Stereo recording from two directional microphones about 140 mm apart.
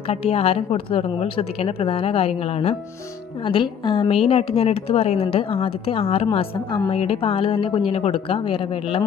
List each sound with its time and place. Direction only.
0.1 s a woman's voice: 45° left (ahead or behind)
3.4 s a woman's voice: 35° left (ahead or behind)
6.2 s speech: 30° left (ahead or behind)
6.9 s speech: 45° left (ahead or behind)